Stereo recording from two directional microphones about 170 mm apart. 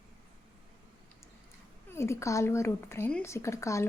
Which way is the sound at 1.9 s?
15° left (ahead or behind).